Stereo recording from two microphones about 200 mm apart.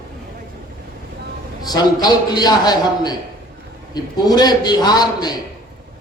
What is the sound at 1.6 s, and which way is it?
A man's voice, 20° left (ahead or behind).